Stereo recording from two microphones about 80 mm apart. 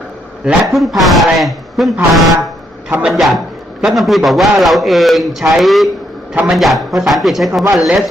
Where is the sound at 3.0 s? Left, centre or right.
Centre.